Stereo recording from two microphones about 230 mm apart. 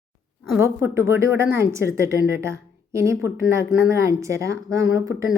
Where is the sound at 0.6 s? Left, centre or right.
Centre.